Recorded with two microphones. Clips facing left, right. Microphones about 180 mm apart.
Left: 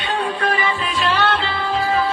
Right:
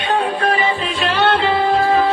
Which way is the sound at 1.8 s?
40° right (ahead or behind).